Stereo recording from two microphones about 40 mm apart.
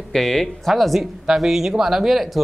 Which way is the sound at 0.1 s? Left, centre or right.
Centre.